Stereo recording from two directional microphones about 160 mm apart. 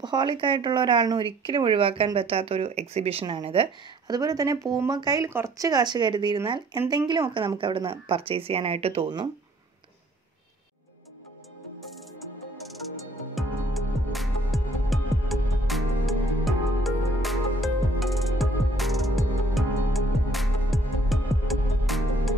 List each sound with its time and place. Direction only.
0.0 s speech: 25° right (ahead or behind)
13.3 s music: centre (ahead or behind)